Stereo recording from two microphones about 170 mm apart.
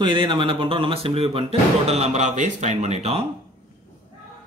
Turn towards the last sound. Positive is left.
turn(degrees=-40)  # may be behind; listen again after turning